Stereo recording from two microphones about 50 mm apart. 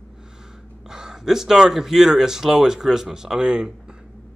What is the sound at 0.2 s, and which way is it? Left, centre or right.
Speech, centre.